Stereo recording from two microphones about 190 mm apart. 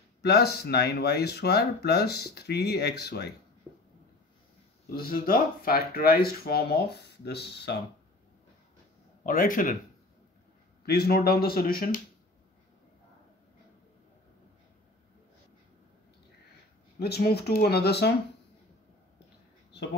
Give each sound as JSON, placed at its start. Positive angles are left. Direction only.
{"t": 0.2, "sound": "speech", "side_deg": 55}
{"t": 4.9, "sound": "speech", "side_deg": 50}
{"t": 9.2, "sound": "speech", "side_deg": 45}
{"t": 10.9, "sound": "speech", "side_deg": 55}
{"t": 17.0, "sound": "speech", "side_deg": 55}